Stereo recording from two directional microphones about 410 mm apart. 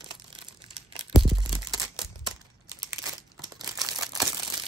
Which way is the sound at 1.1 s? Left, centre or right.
Centre.